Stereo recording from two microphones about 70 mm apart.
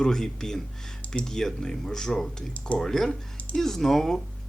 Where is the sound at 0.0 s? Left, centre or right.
Centre.